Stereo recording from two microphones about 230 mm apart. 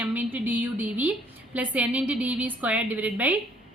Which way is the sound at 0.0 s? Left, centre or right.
Centre.